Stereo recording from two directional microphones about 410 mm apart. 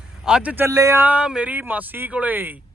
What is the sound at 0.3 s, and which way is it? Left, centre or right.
A man's voice, centre.